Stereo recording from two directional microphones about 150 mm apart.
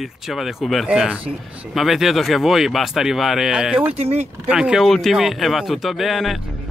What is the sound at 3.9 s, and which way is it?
Speech, 45° right (ahead or behind).